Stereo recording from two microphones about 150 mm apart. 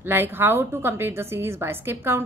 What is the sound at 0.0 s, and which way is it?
A woman's voice, 15° right (ahead or behind).